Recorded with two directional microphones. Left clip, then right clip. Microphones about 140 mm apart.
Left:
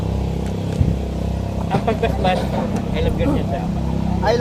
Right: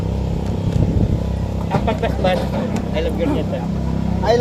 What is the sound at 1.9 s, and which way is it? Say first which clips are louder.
Vehicle: even; 15° left (ahead or behind).